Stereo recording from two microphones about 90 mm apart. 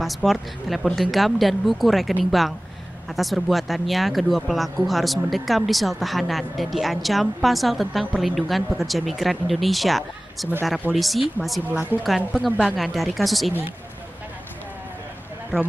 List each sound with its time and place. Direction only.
0.0 s speech: centre (ahead or behind)
3.2 s speech: centre (ahead or behind)
11.7 s a woman's voice: 20° right (ahead or behind)
12.7 s speech: centre (ahead or behind)